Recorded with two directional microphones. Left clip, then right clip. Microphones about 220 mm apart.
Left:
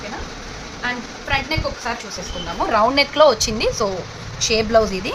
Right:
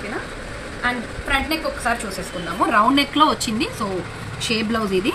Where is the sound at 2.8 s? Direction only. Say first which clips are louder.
Left 2 dB; 40° left (ahead or behind).